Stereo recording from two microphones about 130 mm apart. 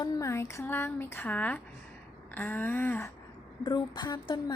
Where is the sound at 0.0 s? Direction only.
25° left (ahead or behind); by 1.6 s 10° left (ahead or behind).